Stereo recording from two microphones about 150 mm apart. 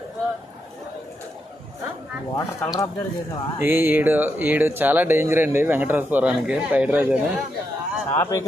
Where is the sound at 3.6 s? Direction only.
15° right (ahead or behind).